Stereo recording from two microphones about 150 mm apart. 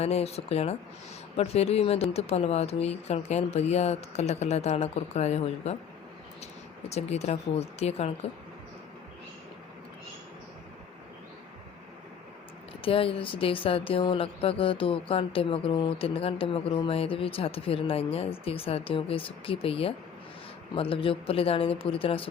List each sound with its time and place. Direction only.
0.0 s speech: 45° left (ahead or behind)
6.8 s speech: 45° left (ahead or behind)
12.8 s speech: 40° left (ahead or behind)